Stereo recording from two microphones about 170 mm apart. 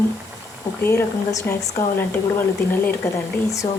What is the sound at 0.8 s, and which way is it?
A woman's voice, 15° left (ahead or behind).